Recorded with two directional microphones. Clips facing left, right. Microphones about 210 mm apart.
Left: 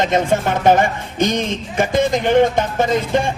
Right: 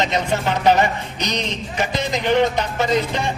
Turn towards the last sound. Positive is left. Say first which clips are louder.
# left 3 dB
turn(degrees=50)  # may be behind; listen again after turning